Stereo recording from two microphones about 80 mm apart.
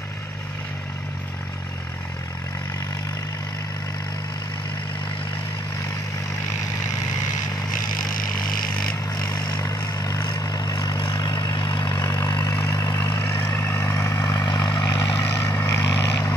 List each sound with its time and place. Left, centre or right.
9.1 s vehicle: left
12.0 s vehicle: left
13.2 s vehicle: left
14.5 s vehicle: left
15.1 s vehicle: left